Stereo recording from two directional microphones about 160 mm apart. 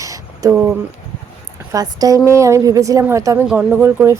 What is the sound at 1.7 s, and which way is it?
A woman's voice, 25° right (ahead or behind).